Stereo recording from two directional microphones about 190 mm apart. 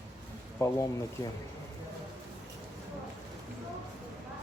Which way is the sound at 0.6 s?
15° left (ahead or behind).